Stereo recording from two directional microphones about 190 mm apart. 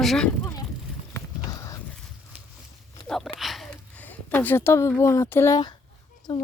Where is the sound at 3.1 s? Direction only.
Centre (ahead or behind); by 5.7 s 15° left (ahead or behind).